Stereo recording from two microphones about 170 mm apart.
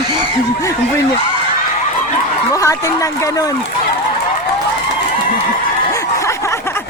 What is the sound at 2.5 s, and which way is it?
Speech, 20° left (ahead or behind).